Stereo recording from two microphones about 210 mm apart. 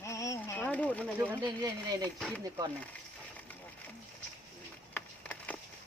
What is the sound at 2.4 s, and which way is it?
Speech, 15° right (ahead or behind).